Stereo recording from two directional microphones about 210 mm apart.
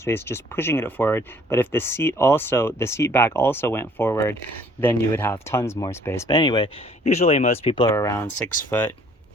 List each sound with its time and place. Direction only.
0.0 s speech: 10° left (ahead or behind); by 7.9 s 30° left (ahead or behind)
7.9 s speech: 15° left (ahead or behind)